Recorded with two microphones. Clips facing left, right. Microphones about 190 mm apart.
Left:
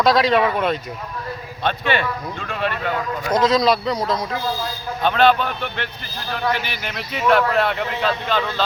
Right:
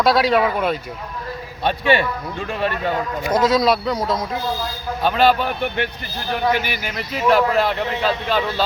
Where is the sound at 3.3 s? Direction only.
5° right (ahead or behind).